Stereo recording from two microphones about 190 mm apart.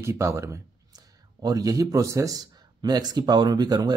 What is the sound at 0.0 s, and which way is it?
Speech, 15° right (ahead or behind).